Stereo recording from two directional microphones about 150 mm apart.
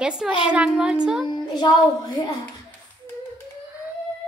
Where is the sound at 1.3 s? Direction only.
30° left (ahead or behind).